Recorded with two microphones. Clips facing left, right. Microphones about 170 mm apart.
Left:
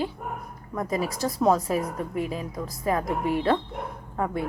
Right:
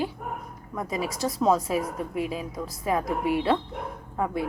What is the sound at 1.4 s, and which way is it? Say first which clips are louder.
A woman's voice: left 1 dB; centre (ahead or behind).